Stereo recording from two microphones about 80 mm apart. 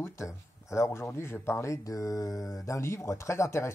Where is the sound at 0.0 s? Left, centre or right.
Left.